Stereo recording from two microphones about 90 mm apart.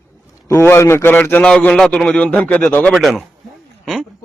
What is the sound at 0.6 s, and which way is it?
A man's voice, 25° left (ahead or behind).